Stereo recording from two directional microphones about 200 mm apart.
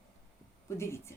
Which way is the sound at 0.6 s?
15° left (ahead or behind).